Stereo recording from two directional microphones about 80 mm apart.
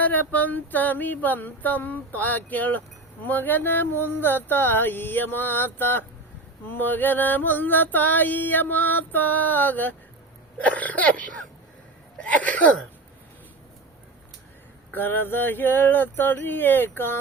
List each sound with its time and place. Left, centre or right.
0.0 s female singing: left
12.1 s speech: centre
14.9 s female singing: left